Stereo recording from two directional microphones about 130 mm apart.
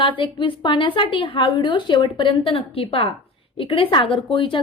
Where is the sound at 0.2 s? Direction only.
40° left (ahead or behind).